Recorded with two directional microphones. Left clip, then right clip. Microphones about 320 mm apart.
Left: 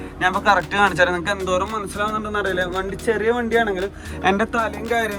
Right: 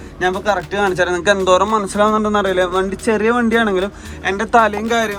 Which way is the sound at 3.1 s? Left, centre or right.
Right.